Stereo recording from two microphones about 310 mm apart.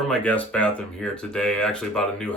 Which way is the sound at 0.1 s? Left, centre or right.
Centre.